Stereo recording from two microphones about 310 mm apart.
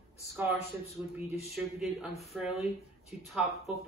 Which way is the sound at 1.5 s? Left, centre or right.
Centre.